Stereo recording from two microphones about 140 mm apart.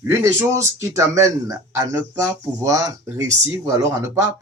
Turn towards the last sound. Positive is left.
turn(degrees=-20)  # may be behind; listen again after turning